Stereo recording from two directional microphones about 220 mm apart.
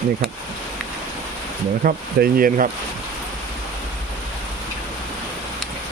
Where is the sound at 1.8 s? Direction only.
40° right (ahead or behind).